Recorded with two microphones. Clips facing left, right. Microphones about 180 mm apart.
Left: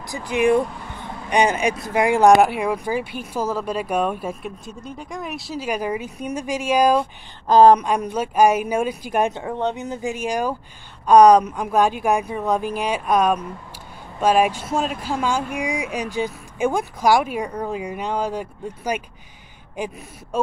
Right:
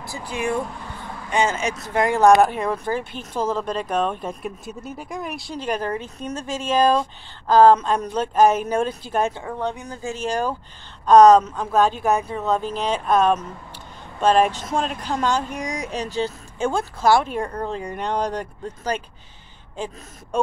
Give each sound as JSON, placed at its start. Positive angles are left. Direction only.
{"t": 0.0, "sound": "speech", "side_deg": 15}
{"t": 4.6, "sound": "speech", "side_deg": -5}